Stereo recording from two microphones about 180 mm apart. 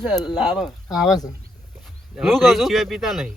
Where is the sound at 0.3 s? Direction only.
Centre (ahead or behind).